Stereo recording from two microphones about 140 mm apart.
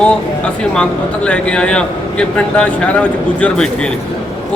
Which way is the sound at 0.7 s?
5° left (ahead or behind).